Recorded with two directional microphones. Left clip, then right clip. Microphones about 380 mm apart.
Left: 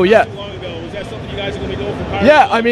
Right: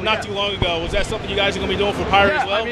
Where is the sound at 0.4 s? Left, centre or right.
Right.